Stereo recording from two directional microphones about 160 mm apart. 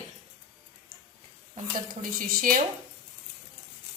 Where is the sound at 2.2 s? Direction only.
65° right (ahead or behind).